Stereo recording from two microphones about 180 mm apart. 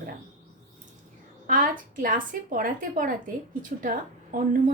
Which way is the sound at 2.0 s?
50° right (ahead or behind).